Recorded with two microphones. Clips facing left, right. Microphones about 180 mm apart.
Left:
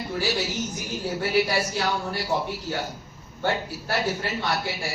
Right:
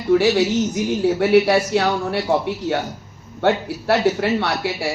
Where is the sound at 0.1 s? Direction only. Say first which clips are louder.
Right 14 dB; 75° right (ahead or behind).